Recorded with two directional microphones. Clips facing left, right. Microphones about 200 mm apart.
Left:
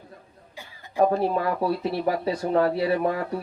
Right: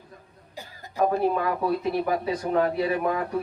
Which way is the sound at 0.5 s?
40° right (ahead or behind).